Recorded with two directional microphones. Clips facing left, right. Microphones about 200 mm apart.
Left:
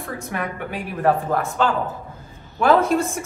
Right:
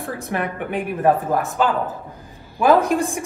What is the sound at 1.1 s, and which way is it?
Speech, 15° right (ahead or behind).